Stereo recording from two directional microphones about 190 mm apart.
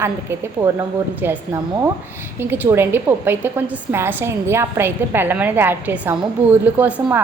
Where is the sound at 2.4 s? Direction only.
10° right (ahead or behind).